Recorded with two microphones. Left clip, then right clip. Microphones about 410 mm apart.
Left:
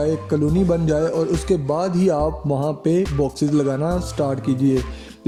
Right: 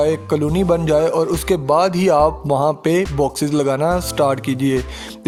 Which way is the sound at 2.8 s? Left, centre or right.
Centre.